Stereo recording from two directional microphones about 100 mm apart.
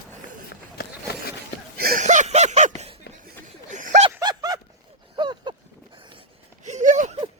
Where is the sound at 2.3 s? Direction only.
90° right.